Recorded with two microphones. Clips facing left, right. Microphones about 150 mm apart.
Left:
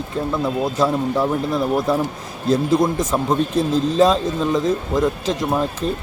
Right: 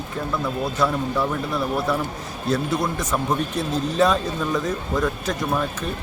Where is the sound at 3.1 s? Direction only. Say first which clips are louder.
Left 3 dB; 30° left (ahead or behind).